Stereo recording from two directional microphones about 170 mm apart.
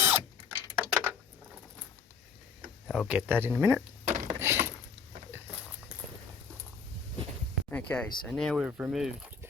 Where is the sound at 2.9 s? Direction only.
5° right (ahead or behind).